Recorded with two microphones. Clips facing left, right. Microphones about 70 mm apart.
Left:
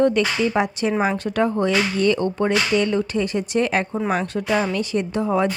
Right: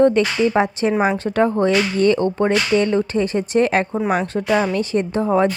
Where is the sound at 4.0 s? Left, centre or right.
Centre.